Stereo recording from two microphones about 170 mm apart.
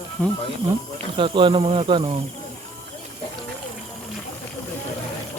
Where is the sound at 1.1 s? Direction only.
30° right (ahead or behind).